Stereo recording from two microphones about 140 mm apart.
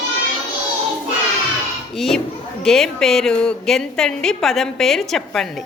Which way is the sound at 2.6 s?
5° left (ahead or behind).